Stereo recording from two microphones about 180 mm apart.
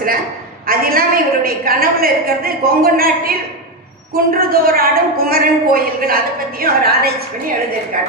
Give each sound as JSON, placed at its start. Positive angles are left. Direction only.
{"t": 0.7, "sound": "a woman's voice", "side_deg": -55}